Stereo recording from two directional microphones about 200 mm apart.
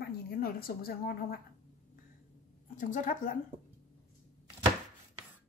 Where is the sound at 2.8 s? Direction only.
40° left (ahead or behind).